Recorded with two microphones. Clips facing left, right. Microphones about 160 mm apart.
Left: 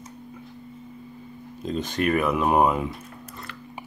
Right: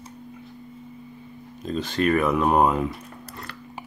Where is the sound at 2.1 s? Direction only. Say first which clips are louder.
Right 1 dB; 5° left (ahead or behind).